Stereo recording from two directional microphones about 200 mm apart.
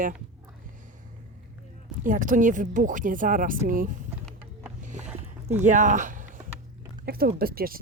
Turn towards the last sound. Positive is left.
turn(degrees=-50)  # may be behind; listen again after turning